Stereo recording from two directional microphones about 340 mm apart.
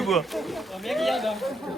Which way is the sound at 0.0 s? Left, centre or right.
Centre.